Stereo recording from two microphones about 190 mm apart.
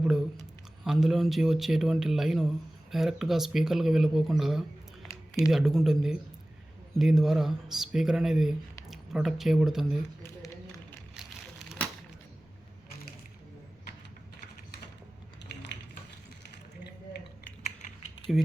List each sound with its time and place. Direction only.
0.0 s a sound: 5° right (ahead or behind)
0.9 s speech: centre (ahead or behind)
17.6 s typing: 35° left (ahead or behind)